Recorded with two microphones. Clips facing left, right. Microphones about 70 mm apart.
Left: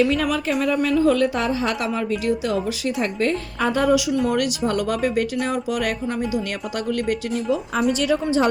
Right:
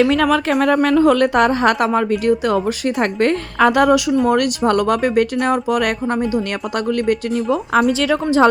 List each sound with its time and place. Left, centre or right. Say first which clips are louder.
0.0 s a woman's voice: right 5 dB; right
3.0 s a woman's voice: right 6 dB; right
3.6 s speech: right 6 dB; right
4.3 s speech: right 6 dB; right
8.1 s a woman's voice: right 7 dB; right